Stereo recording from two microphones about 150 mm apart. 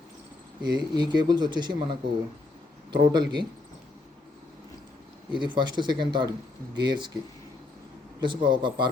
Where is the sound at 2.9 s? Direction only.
30° right (ahead or behind).